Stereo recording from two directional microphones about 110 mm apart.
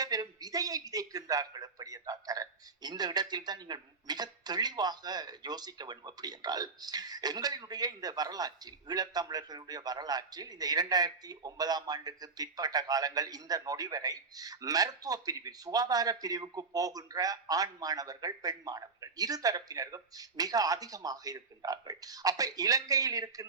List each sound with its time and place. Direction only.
0.0 s a man's voice: 35° right (ahead or behind)